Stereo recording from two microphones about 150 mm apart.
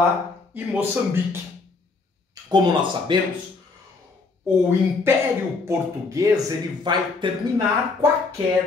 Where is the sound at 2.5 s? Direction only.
30° right (ahead or behind).